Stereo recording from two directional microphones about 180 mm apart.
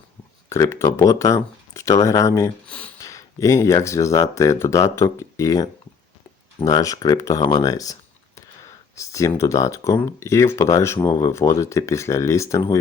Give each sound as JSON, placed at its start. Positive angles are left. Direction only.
{"t": 0.5, "sound": "speech", "side_deg": 15}
{"t": 2.6, "sound": "a sound", "side_deg": 5}
{"t": 3.0, "sound": "speech", "side_deg": 15}
{"t": 9.0, "sound": "speech", "side_deg": 15}